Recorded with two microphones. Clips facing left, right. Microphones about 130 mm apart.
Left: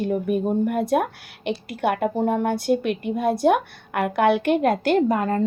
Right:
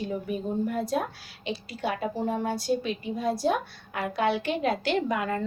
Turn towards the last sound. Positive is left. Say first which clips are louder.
# left 7 dB
turn(degrees=40)  # may be behind; listen again after turning